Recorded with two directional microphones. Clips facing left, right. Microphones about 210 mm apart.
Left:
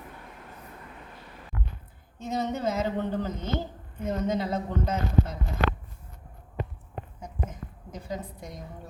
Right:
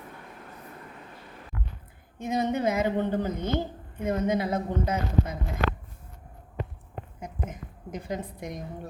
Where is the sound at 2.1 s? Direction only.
15° right (ahead or behind).